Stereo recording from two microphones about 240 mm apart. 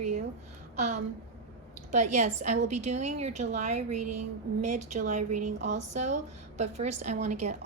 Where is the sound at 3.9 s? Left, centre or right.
Right.